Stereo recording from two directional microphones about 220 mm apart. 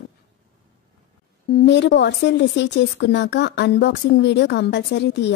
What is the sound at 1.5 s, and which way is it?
Speech, 50° left (ahead or behind).